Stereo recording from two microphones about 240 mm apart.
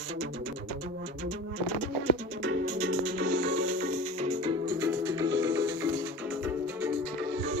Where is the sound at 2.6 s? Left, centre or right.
Right.